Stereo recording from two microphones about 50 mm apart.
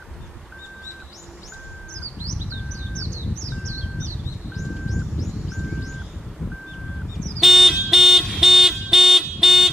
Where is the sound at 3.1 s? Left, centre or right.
Right.